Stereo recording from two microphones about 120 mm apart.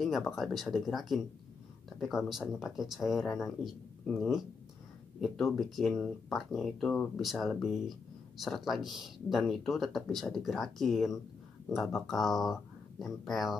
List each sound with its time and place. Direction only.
0.0 s speech: centre (ahead or behind)